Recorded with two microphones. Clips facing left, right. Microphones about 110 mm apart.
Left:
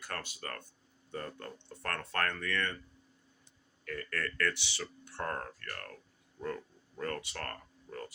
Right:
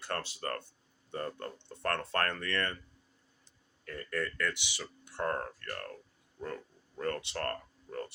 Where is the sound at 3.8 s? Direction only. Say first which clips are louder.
Left 2 dB; 25° right (ahead or behind).